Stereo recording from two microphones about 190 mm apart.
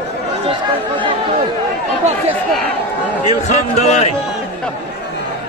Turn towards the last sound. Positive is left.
turn(degrees=35)  # may be behind; listen again after turning